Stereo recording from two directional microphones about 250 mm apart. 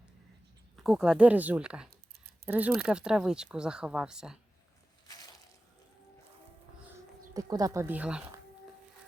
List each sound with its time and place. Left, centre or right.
0.8 s speech: centre
1.9 s a sound: right
2.5 s speech: centre
7.3 s speech: centre